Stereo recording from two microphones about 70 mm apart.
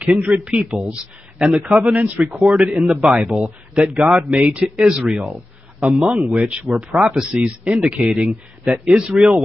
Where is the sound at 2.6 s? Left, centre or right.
Centre.